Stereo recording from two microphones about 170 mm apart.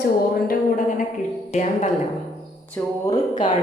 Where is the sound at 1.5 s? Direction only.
45° left (ahead or behind).